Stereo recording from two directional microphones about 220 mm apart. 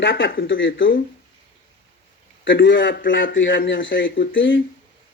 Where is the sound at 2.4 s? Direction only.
55° left (ahead or behind).